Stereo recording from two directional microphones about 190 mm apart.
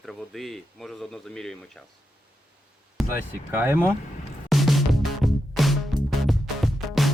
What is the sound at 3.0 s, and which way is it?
Speech, 10° right (ahead or behind).